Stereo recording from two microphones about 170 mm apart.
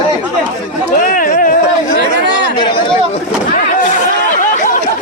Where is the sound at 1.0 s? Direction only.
55° left (ahead or behind).